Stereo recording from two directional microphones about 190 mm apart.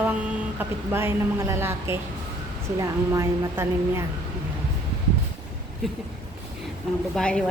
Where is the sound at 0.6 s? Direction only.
10° right (ahead or behind).